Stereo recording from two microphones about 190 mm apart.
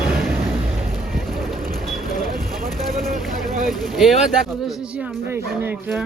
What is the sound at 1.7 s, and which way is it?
Vehicle, centre (ahead or behind).